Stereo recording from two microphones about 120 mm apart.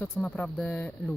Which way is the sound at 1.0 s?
30° left (ahead or behind).